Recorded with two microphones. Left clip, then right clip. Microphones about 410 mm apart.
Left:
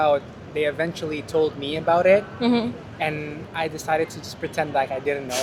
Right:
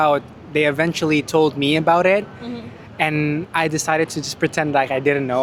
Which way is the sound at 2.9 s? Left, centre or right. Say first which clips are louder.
Right 8 dB; right.